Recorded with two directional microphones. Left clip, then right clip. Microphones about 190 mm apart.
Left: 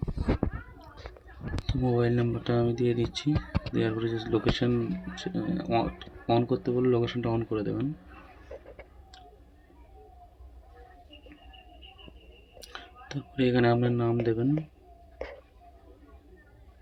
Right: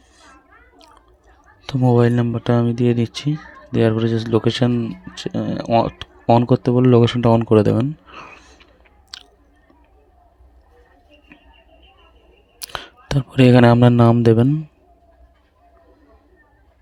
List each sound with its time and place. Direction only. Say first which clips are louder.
1.6 s speech: right 11 dB; 50° right (ahead or behind)
12.7 s speech: right 14 dB; 55° right (ahead or behind)